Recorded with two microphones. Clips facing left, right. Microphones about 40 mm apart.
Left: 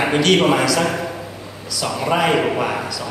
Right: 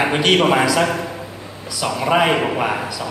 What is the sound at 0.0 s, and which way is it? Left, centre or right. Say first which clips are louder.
A man's voice: even; centre.